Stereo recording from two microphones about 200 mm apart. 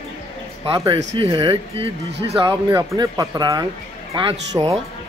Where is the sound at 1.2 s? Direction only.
25° right (ahead or behind).